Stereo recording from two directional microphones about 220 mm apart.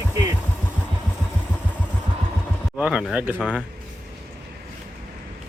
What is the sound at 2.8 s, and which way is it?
Speech, 5° right (ahead or behind).